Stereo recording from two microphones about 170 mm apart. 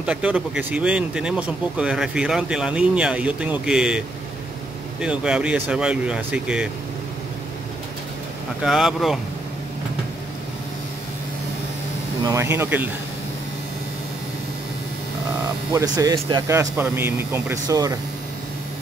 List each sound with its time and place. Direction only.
0.0 s speech: 5° right (ahead or behind)
5.0 s speech: 5° right (ahead or behind)
8.6 s speech: centre (ahead or behind)
12.2 s speech: 20° right (ahead or behind)
15.7 s speech: 20° right (ahead or behind)
16.4 s speech: 15° right (ahead or behind)